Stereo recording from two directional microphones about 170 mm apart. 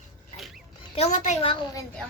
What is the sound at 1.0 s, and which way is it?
Speech, 45° left (ahead or behind).